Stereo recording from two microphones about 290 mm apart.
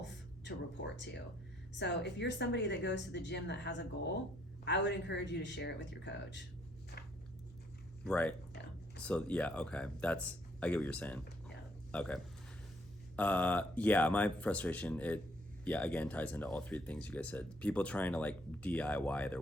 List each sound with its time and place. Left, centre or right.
0.0 s music: left
1.7 s a woman's voice: left
6.9 s a sound: left
8.0 s speech: centre
11.4 s a sound: centre
13.1 s speech: centre